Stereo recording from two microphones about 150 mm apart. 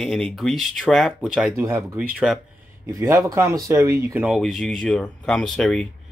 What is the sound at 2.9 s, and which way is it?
Speech, 20° right (ahead or behind).